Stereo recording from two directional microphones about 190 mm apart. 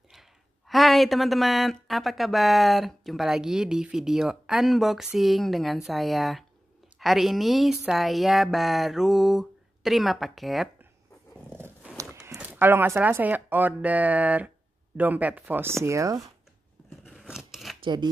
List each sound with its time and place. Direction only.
0.1 s speech: centre (ahead or behind)
11.5 s roaring cats: 10° right (ahead or behind)
12.3 s speech: 10° right (ahead or behind)
17.0 s scissors: centre (ahead or behind)
17.8 s speech: 25° right (ahead or behind)